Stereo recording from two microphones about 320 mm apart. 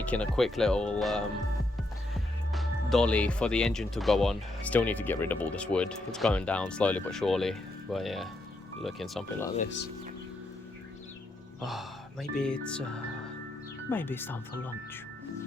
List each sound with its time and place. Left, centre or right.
0.0 s speech: centre
2.5 s speech: centre
9.6 s speech: left
11.6 s speech: centre
13.9 s speech: centre